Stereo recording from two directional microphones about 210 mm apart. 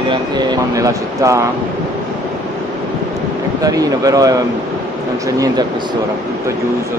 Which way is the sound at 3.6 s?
15° right (ahead or behind).